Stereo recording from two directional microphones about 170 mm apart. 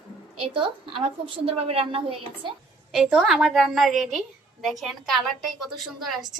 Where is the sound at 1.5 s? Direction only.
35° right (ahead or behind).